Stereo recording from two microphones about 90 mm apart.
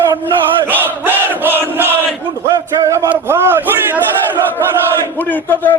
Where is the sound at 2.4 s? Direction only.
35° right (ahead or behind).